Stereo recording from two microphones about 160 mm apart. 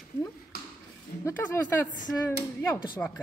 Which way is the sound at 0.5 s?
70° left (ahead or behind).